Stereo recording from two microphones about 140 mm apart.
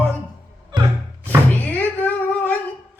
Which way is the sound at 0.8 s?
35° right (ahead or behind).